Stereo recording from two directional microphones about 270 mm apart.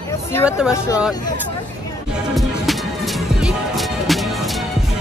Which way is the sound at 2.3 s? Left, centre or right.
Centre.